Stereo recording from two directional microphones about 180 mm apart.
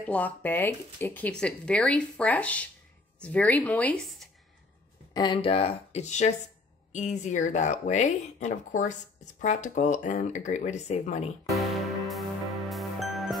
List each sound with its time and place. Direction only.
0.0 s speech: 10° left (ahead or behind)
5.1 s speech: 25° left (ahead or behind)
11.5 s music: centre (ahead or behind)